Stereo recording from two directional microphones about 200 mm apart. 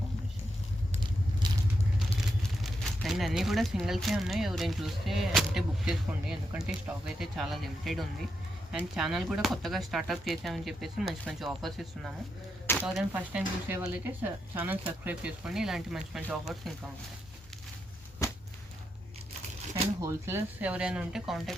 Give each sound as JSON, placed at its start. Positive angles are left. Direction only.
{"t": 1.4, "sound": "vehicle", "side_deg": -20}
{"t": 2.4, "sound": "speech", "side_deg": 0}
{"t": 18.2, "sound": "whip", "side_deg": 15}
{"t": 20.0, "sound": "speech", "side_deg": -15}